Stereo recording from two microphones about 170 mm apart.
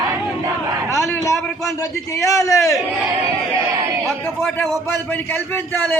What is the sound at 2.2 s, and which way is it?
Speech, 20° left (ahead or behind).